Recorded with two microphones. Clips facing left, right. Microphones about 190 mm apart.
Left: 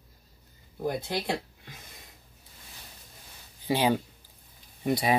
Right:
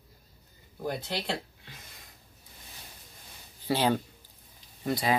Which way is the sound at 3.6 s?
15° left (ahead or behind).